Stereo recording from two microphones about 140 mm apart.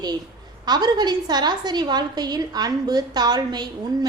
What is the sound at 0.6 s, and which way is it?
A woman's voice, 30° right (ahead or behind).